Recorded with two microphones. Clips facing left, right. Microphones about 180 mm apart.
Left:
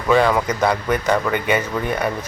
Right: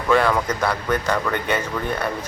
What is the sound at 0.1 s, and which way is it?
Speech, 10° left (ahead or behind).